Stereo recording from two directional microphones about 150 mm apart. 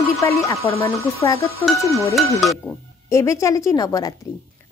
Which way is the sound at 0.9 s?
20° left (ahead or behind).